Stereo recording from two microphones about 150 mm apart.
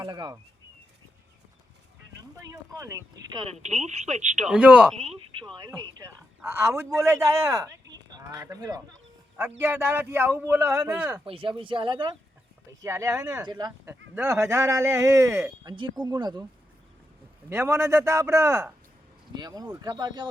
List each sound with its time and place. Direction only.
0.0 s a man's voice: 25° right (ahead or behind)
2.4 s a man's voice: 20° right (ahead or behind)
3.4 s speech: 50° right (ahead or behind)
4.4 s a man's voice: 10° right (ahead or behind)
5.5 s a man's voice: 25° right (ahead or behind)
9.4 s a man's voice: 10° right (ahead or behind)
11.3 s speech: 35° right (ahead or behind)
12.8 s a man's voice: 20° right (ahead or behind)
13.8 s a man's voice: 20° right (ahead or behind)
15.6 s speech: 30° right (ahead or behind)
17.5 s a man's voice: 15° right (ahead or behind)